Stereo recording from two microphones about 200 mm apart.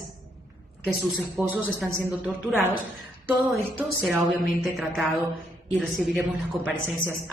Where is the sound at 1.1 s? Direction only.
5° right (ahead or behind).